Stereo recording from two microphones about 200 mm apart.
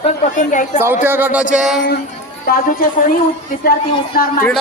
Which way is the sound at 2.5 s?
45° left (ahead or behind).